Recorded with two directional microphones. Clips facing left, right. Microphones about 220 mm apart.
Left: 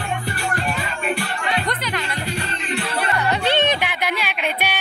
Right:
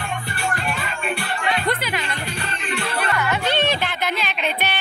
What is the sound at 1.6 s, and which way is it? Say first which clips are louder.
Music: right 2 dB; 10° right (ahead or behind).